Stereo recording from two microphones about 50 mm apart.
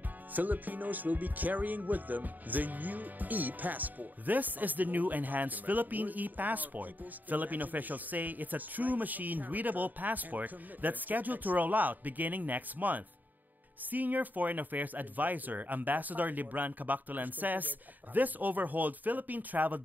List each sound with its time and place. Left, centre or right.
0.3 s speech: right